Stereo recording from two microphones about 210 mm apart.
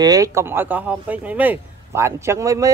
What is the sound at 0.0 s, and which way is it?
Speech, 15° right (ahead or behind).